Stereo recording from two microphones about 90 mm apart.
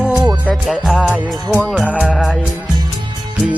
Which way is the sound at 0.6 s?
Centre (ahead or behind).